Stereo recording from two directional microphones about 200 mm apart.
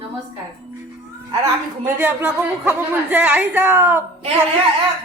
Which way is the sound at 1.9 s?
10° right (ahead or behind).